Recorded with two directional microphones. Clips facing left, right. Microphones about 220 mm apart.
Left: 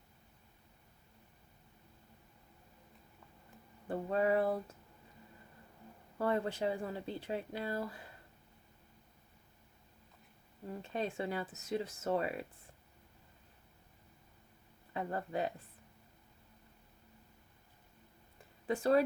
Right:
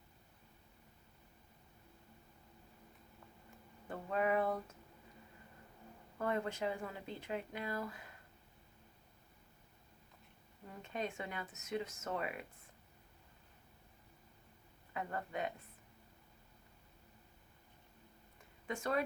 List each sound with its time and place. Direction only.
3.8 s speech: 30° left (ahead or behind)
6.1 s speech: 30° left (ahead or behind)
10.8 s speech: 30° left (ahead or behind)
14.9 s speech: 30° left (ahead or behind)
18.7 s speech: 35° left (ahead or behind)